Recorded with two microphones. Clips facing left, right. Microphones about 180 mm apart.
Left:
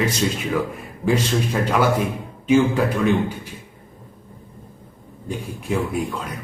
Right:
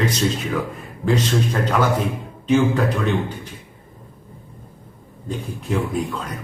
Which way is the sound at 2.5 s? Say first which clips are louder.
Left 1 dB; 10° left (ahead or behind).